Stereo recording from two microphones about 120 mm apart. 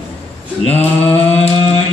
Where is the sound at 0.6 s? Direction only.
55° left (ahead or behind).